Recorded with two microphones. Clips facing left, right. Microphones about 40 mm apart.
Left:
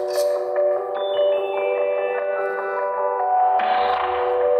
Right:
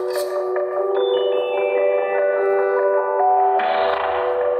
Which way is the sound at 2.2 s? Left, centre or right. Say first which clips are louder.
Right 5 dB; centre.